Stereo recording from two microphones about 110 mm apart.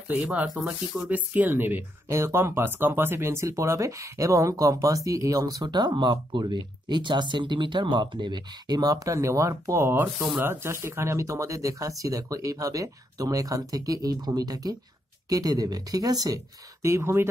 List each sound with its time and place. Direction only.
0.1 s speech: 15° right (ahead or behind)